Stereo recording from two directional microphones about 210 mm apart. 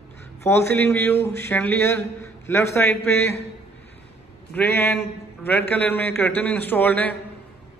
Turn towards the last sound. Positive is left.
turn(degrees=10)  # may be behind; listen again after turning